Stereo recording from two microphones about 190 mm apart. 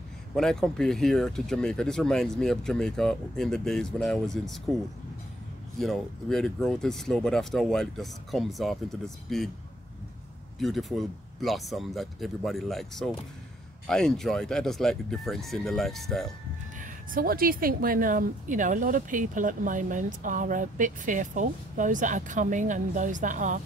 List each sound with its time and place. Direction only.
0.4 s speech: 5° left (ahead or behind)
5.8 s speech: centre (ahead or behind)
10.6 s speech: centre (ahead or behind)
16.8 s a woman's voice: 45° right (ahead or behind)